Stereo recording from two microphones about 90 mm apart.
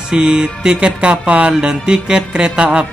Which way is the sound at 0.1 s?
10° right (ahead or behind).